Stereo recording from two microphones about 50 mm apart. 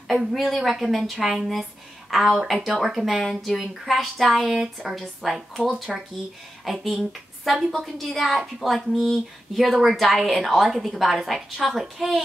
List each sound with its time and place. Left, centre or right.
0.1 s speech: centre
5.6 s speech: right
6.6 s speech: centre